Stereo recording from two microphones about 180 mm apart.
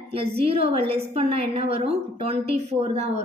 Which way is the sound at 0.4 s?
30° right (ahead or behind).